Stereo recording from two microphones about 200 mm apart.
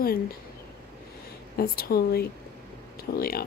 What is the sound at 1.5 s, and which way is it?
Speech, 50° left (ahead or behind).